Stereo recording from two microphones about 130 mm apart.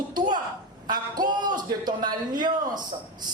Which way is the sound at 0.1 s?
30° right (ahead or behind).